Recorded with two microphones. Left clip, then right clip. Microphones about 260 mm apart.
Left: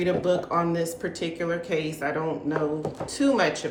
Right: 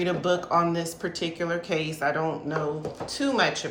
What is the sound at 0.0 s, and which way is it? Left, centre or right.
A woman's voice, centre.